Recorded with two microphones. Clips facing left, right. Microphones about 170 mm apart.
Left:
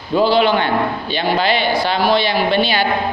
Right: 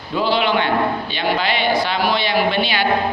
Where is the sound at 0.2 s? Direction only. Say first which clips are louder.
Left 4 dB; 40° left (ahead or behind).